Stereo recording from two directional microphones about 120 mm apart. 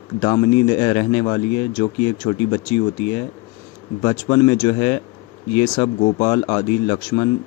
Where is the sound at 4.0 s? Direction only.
50° left (ahead or behind).